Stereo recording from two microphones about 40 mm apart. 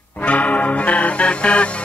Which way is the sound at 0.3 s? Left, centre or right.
Left.